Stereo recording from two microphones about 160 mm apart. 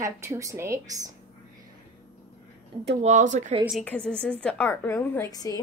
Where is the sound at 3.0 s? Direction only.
50° right (ahead or behind).